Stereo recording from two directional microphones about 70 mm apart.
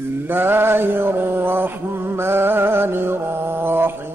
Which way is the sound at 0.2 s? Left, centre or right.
Right.